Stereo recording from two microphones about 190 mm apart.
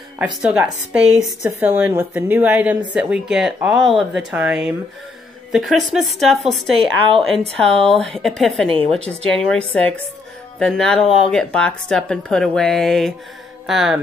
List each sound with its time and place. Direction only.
0.2 s a woman's voice: 5° right (ahead or behind)
8.6 s a woman's voice: 30° right (ahead or behind)
8.9 s a woman's voice: 5° left (ahead or behind)